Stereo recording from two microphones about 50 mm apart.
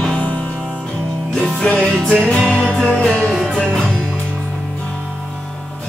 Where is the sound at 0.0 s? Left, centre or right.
Left.